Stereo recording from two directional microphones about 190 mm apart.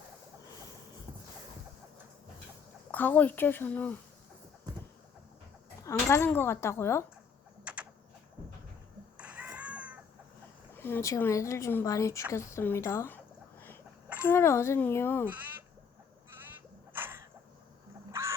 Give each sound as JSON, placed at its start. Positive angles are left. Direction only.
{"t": 2.9, "sound": "speech", "side_deg": 10}
{"t": 5.8, "sound": "speech", "side_deg": 15}
{"t": 7.6, "sound": "typing", "side_deg": -5}
{"t": 9.1, "sound": "a sound", "side_deg": -5}
{"t": 10.8, "sound": "speech", "side_deg": 10}
{"t": 14.3, "sound": "speech", "side_deg": 15}
{"t": 15.3, "sound": "bleat", "side_deg": -10}
{"t": 16.4, "sound": "a sound", "side_deg": -10}
{"t": 18.1, "sound": "music", "side_deg": -15}